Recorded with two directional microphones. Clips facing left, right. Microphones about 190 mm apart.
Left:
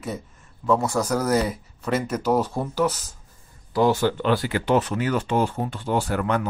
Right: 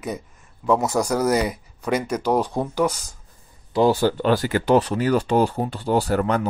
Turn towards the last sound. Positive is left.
turn(degrees=-35)  # may be behind; listen again after turning